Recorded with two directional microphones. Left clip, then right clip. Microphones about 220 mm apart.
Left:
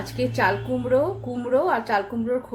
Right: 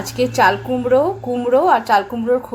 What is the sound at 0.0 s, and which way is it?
A woman's voice, 15° right (ahead or behind).